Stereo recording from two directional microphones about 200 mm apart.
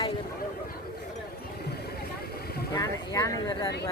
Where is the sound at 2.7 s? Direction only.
20° left (ahead or behind).